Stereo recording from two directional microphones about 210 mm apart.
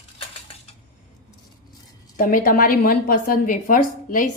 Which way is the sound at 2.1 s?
45° left (ahead or behind).